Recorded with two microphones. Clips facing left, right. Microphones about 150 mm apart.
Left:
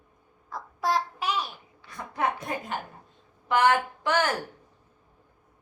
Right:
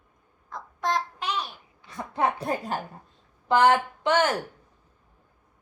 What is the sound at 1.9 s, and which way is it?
A woman's voice, 25° right (ahead or behind).